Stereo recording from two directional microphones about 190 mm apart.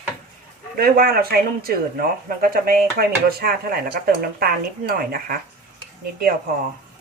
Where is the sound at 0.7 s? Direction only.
50° right (ahead or behind).